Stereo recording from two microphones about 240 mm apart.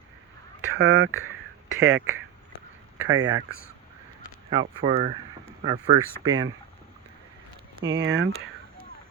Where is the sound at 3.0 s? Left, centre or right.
Right.